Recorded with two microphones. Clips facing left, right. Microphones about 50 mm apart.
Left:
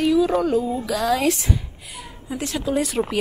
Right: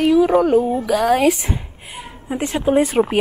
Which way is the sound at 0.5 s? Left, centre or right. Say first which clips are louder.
Right 6 dB; right.